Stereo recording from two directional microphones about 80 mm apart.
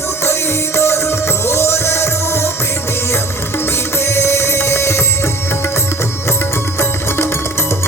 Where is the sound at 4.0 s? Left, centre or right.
Left.